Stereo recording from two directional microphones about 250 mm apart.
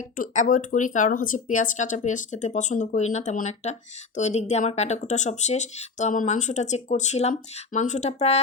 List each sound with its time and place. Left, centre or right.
0.2 s speech: left